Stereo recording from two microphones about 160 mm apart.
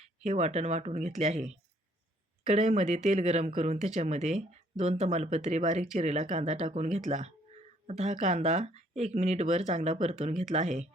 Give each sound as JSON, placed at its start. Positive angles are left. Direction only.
{"t": 0.3, "sound": "speech", "side_deg": -45}